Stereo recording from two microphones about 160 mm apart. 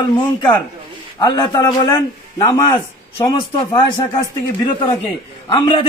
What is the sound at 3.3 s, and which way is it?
Speech, 25° left (ahead or behind).